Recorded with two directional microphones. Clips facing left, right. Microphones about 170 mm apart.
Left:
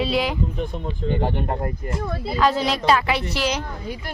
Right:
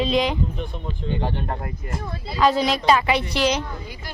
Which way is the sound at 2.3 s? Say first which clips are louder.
Right 2 dB; 5° right (ahead or behind).